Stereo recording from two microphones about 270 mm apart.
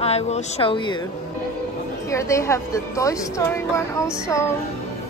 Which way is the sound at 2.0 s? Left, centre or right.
Centre.